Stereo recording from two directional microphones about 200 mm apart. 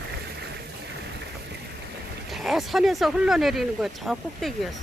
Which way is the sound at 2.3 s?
Centre (ahead or behind).